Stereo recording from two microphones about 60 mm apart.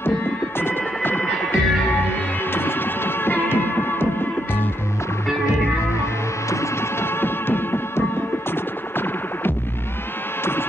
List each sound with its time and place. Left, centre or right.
0.6 s music: left
6.5 s music: left